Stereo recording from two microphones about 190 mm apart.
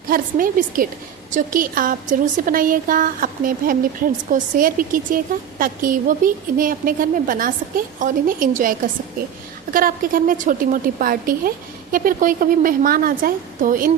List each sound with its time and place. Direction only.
0.1 s a woman's voice: 45° right (ahead or behind)
9.7 s a woman's voice: 45° right (ahead or behind)